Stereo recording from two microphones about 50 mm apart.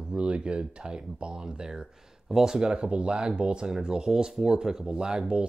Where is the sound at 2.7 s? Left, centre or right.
Right.